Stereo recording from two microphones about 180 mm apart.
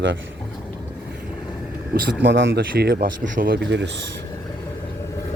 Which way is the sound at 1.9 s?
70° right (ahead or behind).